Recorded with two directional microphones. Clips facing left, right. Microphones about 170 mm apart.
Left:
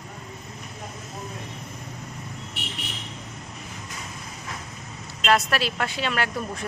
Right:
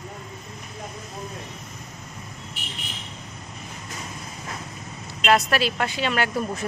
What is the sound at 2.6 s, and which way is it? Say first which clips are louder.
Vehicle: left 5 dB; 70° left (ahead or behind).